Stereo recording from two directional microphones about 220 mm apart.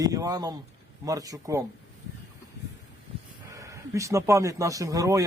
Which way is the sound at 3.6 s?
15° right (ahead or behind).